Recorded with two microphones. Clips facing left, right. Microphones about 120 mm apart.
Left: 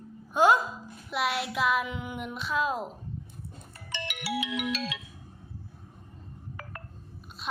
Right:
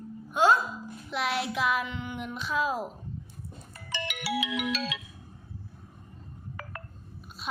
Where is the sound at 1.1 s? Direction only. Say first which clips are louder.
Even; 5° left (ahead or behind).